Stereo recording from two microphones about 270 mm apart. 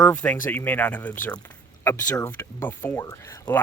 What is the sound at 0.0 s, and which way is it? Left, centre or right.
Speech, centre.